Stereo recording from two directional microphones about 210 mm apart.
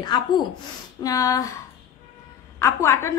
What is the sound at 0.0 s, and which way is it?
A woman's voice, 20° left (ahead or behind).